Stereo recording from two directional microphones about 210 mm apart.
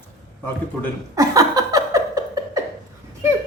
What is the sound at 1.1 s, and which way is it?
Laughter, 15° right (ahead or behind).